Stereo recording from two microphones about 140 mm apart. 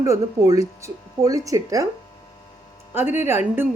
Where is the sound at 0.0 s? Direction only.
25° right (ahead or behind).